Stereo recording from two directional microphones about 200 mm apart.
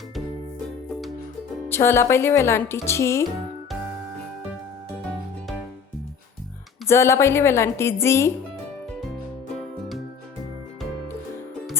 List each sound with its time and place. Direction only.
1.7 s speech: 10° left (ahead or behind)
6.8 s speech: 15° left (ahead or behind)